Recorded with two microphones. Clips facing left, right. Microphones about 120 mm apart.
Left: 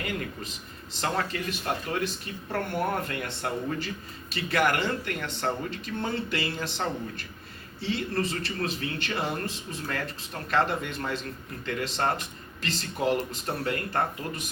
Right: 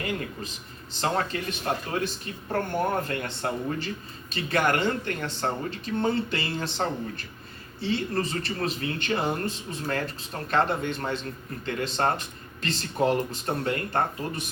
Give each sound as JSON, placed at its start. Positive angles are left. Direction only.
{"t": 0.0, "sound": "speech", "side_deg": -30}